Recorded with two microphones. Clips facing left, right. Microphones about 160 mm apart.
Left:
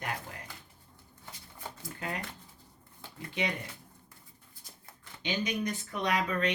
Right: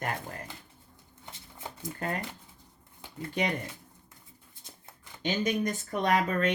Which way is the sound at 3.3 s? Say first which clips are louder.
Right 3 dB; 45° right (ahead or behind).